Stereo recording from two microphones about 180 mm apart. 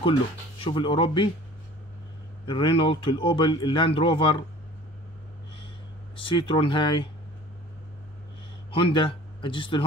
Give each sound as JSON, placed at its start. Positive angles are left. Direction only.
{"t": 0.7, "sound": "speech", "side_deg": 30}
{"t": 2.4, "sound": "speech", "side_deg": 30}
{"t": 6.1, "sound": "speech", "side_deg": 30}
{"t": 8.7, "sound": "speech", "side_deg": 30}